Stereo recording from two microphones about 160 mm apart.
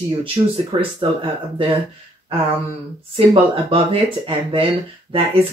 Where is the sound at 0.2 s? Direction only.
35° right (ahead or behind).